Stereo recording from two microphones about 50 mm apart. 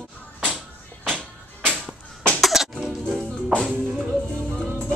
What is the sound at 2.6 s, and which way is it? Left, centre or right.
Music, centre.